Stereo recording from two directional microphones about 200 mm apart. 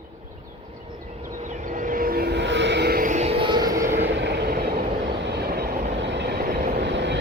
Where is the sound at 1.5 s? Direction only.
40° right (ahead or behind); by 4.0 s 15° right (ahead or behind).